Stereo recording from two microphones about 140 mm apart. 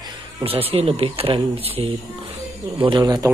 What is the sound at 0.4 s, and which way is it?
Speech, 40° right (ahead or behind).